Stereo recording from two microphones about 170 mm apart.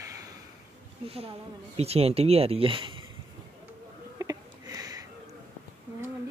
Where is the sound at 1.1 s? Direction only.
35° right (ahead or behind).